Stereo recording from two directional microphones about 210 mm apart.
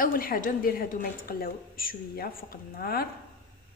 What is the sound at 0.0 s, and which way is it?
A woman's voice, 45° left (ahead or behind).